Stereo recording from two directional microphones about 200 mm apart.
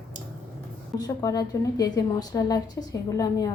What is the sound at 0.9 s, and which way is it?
A woman's voice, 20° left (ahead or behind).